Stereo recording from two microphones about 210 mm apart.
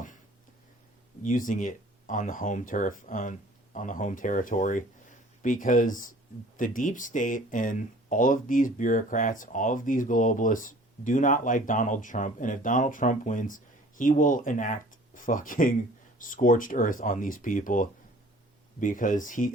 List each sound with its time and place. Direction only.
1.2 s speech: 40° left (ahead or behind)